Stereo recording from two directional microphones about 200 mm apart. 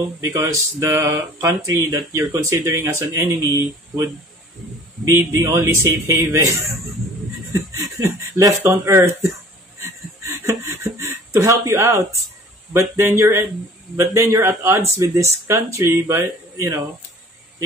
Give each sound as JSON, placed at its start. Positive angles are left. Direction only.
{"t": 0.2, "sound": "speech", "side_deg": -15}
{"t": 7.7, "sound": "speech", "side_deg": -15}
{"t": 10.2, "sound": "a sound", "side_deg": -15}
{"t": 12.7, "sound": "speech", "side_deg": -15}